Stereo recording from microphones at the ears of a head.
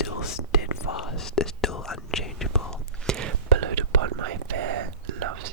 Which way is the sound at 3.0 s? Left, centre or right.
Right.